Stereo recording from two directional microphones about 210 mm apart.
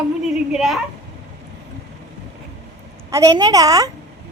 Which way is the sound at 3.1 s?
15° right (ahead or behind).